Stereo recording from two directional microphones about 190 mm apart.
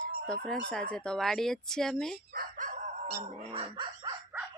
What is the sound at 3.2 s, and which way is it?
Speech, 30° right (ahead or behind).